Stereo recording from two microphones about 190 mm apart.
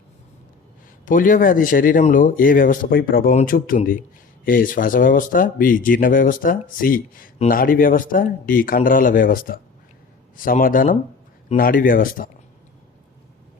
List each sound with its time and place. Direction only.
1.0 s speech: 45° left (ahead or behind)